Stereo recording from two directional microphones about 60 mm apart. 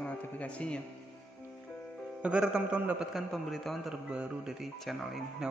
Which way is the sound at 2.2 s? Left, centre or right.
Centre.